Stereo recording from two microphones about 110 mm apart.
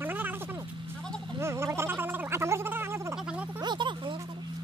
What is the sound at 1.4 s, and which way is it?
Gargling, 25° right (ahead or behind).